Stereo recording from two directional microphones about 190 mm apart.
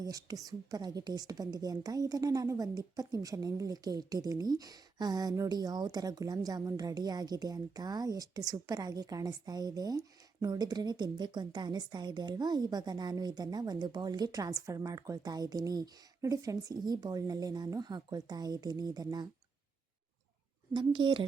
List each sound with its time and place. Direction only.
0.0 s a woman's voice: 20° right (ahead or behind)
20.7 s a woman's voice: 25° right (ahead or behind)